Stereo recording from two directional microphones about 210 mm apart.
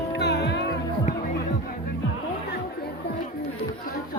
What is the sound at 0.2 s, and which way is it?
Music, 55° left (ahead or behind).